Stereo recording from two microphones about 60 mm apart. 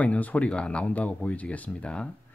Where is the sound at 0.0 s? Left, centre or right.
Left.